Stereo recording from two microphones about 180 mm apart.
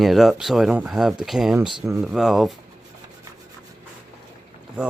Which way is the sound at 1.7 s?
25° right (ahead or behind).